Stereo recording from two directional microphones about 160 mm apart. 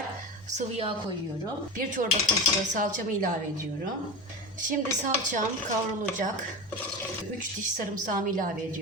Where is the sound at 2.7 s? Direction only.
55° right (ahead or behind).